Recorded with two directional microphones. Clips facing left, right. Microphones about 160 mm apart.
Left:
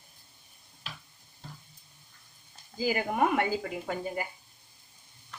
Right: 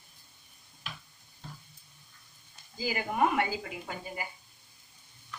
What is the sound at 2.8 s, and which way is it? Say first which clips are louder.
Speech: left 2 dB; 50° left (ahead or behind).